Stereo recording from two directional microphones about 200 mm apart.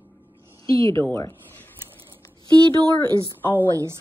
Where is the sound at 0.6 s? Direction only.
15° left (ahead or behind).